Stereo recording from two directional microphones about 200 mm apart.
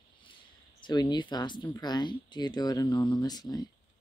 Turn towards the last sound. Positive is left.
turn(degrees=20)  # may be behind; listen again after turning